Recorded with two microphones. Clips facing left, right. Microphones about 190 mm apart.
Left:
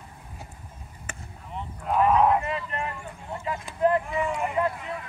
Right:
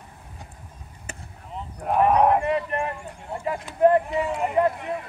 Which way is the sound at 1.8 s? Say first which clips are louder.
Right 2 dB; 50° right (ahead or behind).